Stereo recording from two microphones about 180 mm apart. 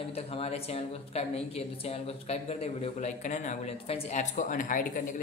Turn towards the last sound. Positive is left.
turn(degrees=45)  # may be behind; listen again after turning